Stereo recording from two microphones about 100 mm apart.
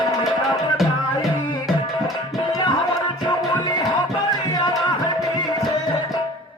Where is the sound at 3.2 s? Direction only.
45° left (ahead or behind).